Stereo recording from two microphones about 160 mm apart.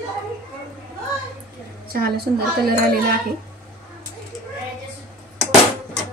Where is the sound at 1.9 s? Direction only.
70° right (ahead or behind).